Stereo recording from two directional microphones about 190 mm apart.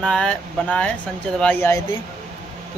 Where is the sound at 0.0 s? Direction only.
5° left (ahead or behind).